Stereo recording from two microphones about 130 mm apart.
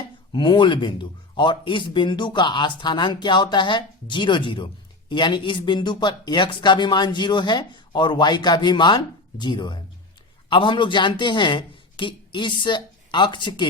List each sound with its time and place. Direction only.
0.3 s a man's voice: 40° left (ahead or behind)